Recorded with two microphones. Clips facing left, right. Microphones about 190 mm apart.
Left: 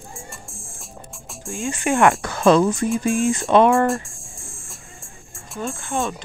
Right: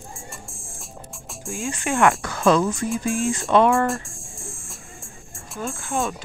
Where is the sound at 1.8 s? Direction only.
15° left (ahead or behind).